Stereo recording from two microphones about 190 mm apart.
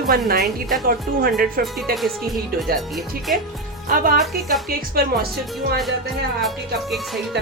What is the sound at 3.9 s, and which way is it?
Speech, 45° right (ahead or behind).